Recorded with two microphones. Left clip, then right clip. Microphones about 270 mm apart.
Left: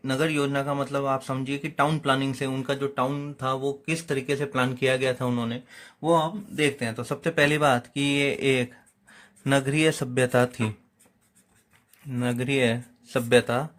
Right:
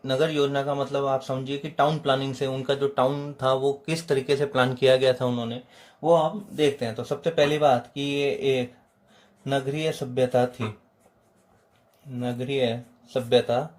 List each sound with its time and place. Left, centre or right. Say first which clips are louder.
0.0 s a man's voice: right 2 dB; centre
6.6 s a man's voice: right 2 dB; left
12.1 s a man's voice: left 2 dB; left